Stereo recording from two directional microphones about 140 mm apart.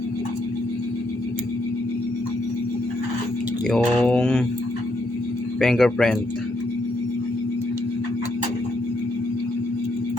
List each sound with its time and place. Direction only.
3.7 s mantra: 5° left (ahead or behind)
5.5 s speech: 5° left (ahead or behind)